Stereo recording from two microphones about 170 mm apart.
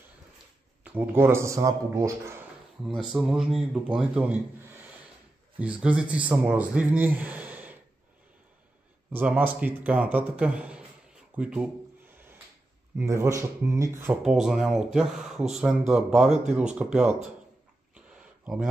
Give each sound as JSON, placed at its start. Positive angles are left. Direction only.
{"t": 0.8, "sound": "a man's voice", "side_deg": -10}
{"t": 2.8, "sound": "a man's voice", "side_deg": 0}
{"t": 9.1, "sound": "a man's voice", "side_deg": -10}
{"t": 12.9, "sound": "a man's voice", "side_deg": -15}
{"t": 14.2, "sound": "a man's voice", "side_deg": -5}
{"t": 17.9, "sound": "a sound", "side_deg": -5}